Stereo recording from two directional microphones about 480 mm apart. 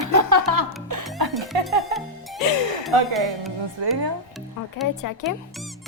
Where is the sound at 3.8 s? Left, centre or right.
Right.